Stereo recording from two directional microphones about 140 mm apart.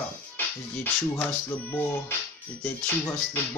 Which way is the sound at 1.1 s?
15° left (ahead or behind).